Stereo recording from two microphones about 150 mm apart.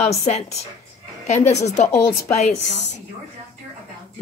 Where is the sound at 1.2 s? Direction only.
50° left (ahead or behind).